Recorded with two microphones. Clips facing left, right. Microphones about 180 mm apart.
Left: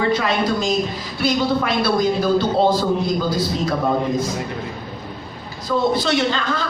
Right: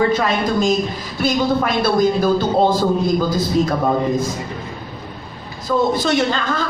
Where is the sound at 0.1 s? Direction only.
45° right (ahead or behind).